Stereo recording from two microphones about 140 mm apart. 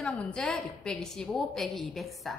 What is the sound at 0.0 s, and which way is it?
A woman's voice, 5° left (ahead or behind).